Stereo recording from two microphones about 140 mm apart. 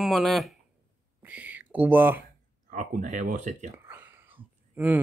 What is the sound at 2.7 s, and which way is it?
Speech, 65° right (ahead or behind).